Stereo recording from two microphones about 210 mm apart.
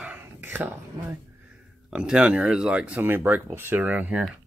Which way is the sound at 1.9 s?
5° right (ahead or behind).